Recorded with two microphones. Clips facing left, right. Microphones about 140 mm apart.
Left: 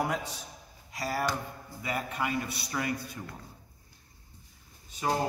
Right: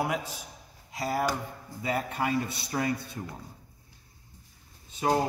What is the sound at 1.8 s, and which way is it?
A man's voice, 35° right (ahead or behind).